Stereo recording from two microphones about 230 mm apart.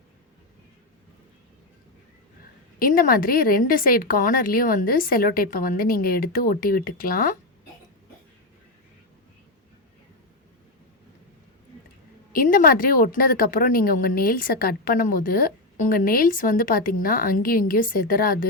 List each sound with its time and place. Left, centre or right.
2.7 s speech: left
12.3 s speech: left